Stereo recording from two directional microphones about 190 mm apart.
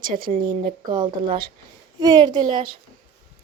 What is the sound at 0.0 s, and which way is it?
Speech, 45° right (ahead or behind).